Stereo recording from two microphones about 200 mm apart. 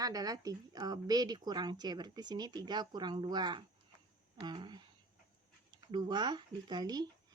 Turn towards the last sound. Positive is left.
turn(degrees=-20)  # may be behind; listen again after turning